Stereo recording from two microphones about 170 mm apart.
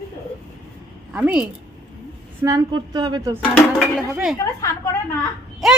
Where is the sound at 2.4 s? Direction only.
20° right (ahead or behind).